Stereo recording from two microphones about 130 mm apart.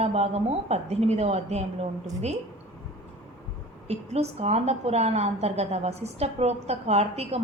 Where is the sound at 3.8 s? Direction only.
55° right (ahead or behind).